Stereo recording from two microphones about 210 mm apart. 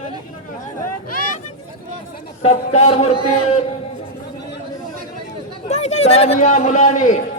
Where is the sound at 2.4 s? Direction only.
30° left (ahead or behind).